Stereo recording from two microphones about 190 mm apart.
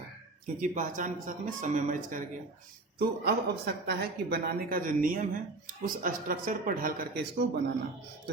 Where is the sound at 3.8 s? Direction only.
55° right (ahead or behind).